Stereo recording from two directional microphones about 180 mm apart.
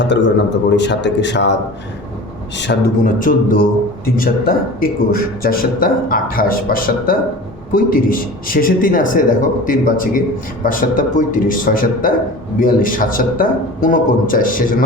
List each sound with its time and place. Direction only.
0.0 s a man's voice: 80° left
2.6 s speech: 75° left (ahead or behind)
3.0 s a man's voice: 50° left (ahead or behind)